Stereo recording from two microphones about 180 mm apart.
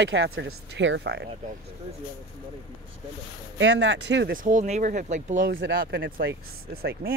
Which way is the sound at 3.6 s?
85° right.